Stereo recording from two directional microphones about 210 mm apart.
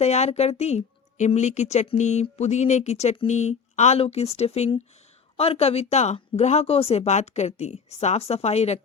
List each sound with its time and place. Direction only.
0.0 s speech: 30° left (ahead or behind)